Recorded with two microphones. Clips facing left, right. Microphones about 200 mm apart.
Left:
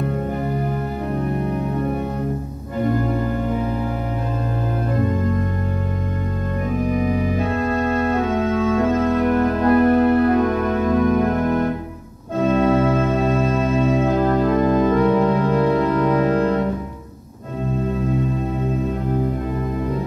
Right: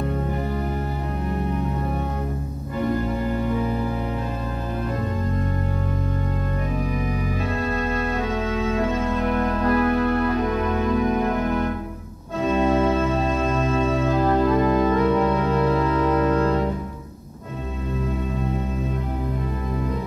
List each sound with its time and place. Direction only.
9.0 s music: 45° left (ahead or behind)
12.4 s organ: 50° left (ahead or behind)
14.6 s organ: 45° left (ahead or behind)